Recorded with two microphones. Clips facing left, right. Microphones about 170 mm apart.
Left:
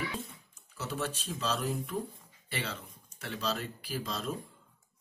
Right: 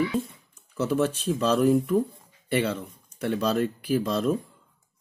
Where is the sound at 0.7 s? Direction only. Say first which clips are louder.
Right 12 dB; 50° right (ahead or behind).